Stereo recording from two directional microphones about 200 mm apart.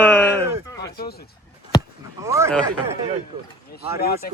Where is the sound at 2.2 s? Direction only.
15° right (ahead or behind).